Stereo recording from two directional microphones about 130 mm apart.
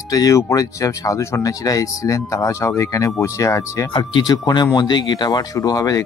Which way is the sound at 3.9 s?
35° left (ahead or behind).